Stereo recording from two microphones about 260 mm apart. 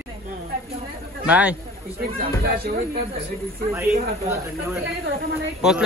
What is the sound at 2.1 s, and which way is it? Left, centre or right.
Speech, right.